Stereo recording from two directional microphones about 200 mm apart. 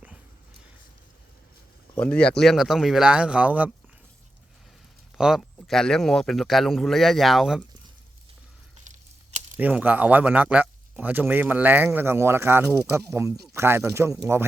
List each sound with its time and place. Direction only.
2.0 s speech: 5° left (ahead or behind)
5.1 s speech: centre (ahead or behind)
8.9 s a sound: 40° right (ahead or behind)
9.6 s speech: 10° right (ahead or behind)